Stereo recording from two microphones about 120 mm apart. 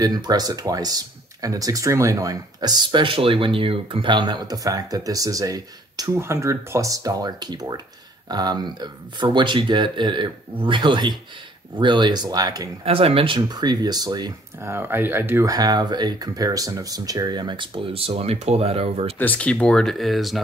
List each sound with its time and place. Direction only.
0.0 s speech: 35° right (ahead or behind)
12.8 s speech: 50° right (ahead or behind); by 14.3 s 35° right (ahead or behind)
14.6 s speech: 20° right (ahead or behind)
15.5 s speech: 35° right (ahead or behind); by 19.1 s 55° right (ahead or behind)
19.1 s speech: 15° left (ahead or behind)